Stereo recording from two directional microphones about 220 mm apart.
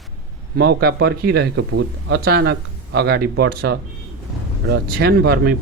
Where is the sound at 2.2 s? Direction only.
45° right (ahead or behind).